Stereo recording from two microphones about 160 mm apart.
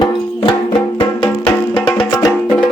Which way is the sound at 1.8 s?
25° left (ahead or behind).